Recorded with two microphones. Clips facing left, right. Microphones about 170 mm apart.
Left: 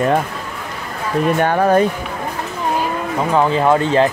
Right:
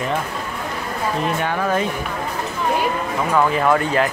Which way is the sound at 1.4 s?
45° left (ahead or behind).